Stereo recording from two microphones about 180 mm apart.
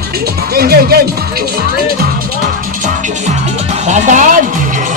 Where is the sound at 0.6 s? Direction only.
60° right (ahead or behind).